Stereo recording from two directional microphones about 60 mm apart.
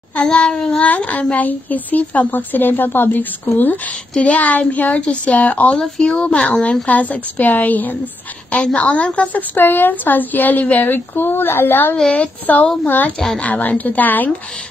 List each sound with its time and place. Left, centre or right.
0.1 s child singing: centre
0.8 s a woman's voice: left
4.1 s a woman's voice: left
9.6 s speech: left
12.0 s a woman's voice: centre